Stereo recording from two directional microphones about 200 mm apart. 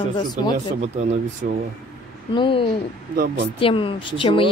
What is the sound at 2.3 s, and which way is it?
Speech, 25° left (ahead or behind).